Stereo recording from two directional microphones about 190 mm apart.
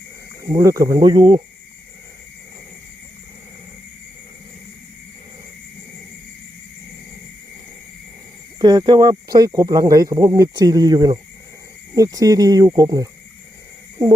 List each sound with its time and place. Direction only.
0.4 s speech: 20° right (ahead or behind)
8.5 s speech: 20° right (ahead or behind)